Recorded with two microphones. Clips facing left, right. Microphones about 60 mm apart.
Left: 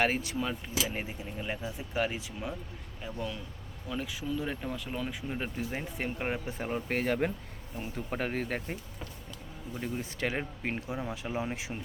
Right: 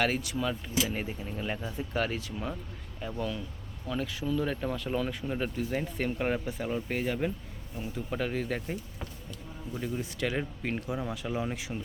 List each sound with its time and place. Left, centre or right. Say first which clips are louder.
0.0 s speech: even; left
0.3 s speech: right 2 dB; centre
5.5 s speech: right 4 dB; centre
6.5 s speech: even; left
7.8 s speech: right 1 dB; left
9.8 s speech: right 1 dB; left